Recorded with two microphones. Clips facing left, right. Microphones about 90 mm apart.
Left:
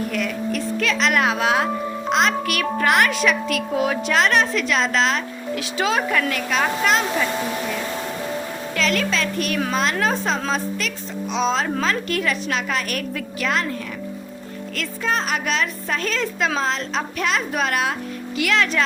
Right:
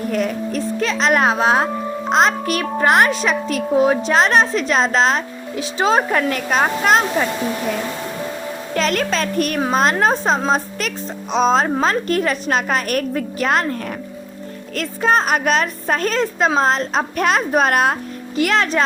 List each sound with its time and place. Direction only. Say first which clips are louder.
0.1 s speech: right 4 dB; 35° right (ahead or behind)
8.7 s a woman's voice: right 3 dB; 45° right (ahead or behind)
14.8 s a woman's voice: right 7 dB; 45° right (ahead or behind)